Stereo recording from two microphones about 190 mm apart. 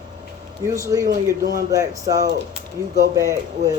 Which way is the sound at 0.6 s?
15° right (ahead or behind).